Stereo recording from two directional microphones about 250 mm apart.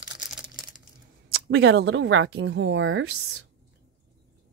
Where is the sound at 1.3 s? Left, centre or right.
Right.